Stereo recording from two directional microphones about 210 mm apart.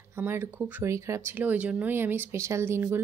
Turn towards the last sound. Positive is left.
turn(degrees=-10)  # may be behind; listen again after turning